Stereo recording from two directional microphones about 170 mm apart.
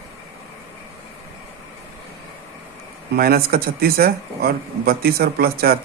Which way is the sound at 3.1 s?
65° right (ahead or behind).